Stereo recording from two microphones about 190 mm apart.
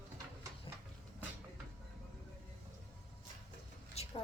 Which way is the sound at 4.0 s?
30° left (ahead or behind).